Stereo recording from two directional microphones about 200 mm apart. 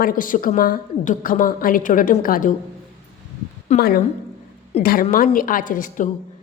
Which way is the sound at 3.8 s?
50° left (ahead or behind).